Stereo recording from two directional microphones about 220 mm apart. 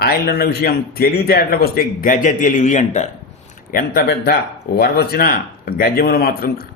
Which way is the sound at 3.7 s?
45° left (ahead or behind).